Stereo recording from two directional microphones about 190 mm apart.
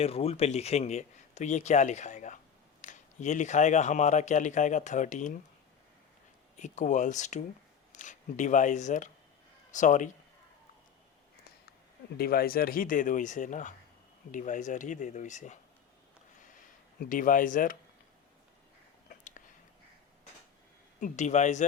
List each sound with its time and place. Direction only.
0.0 s speech: 30° left (ahead or behind)
6.6 s speech: 40° left (ahead or behind)
12.1 s speech: 50° left (ahead or behind)
17.0 s speech: 45° left (ahead or behind)
19.0 s a sound: 45° left (ahead or behind)
21.0 s speech: 40° left (ahead or behind)